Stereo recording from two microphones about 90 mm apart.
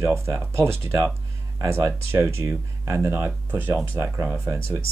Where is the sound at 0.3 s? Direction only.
30° right (ahead or behind).